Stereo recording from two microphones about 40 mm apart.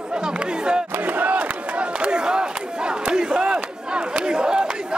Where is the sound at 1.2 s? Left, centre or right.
Right.